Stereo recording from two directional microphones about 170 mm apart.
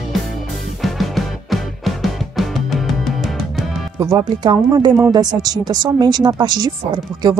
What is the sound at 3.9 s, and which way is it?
Speech, 20° right (ahead or behind).